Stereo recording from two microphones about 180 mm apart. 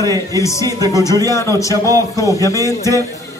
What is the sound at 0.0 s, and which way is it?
Speech, 20° right (ahead or behind).